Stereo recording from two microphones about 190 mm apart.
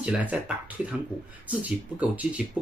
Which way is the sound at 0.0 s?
10° right (ahead or behind).